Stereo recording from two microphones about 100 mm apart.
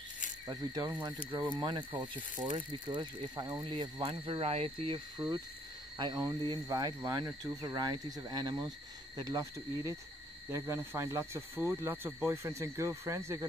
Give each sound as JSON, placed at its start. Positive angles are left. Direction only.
{"t": 0.5, "sound": "speech", "side_deg": -40}
{"t": 4.1, "sound": "speech", "side_deg": -80}
{"t": 5.9, "sound": "speech", "side_deg": -45}
{"t": 10.5, "sound": "speech", "side_deg": -25}